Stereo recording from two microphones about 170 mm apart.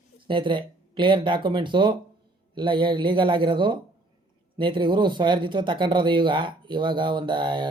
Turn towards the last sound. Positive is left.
turn(degrees=-25)  # may be behind; listen again after turning